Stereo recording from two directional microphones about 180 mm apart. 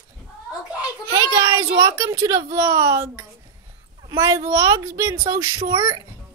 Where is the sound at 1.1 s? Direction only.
20° right (ahead or behind).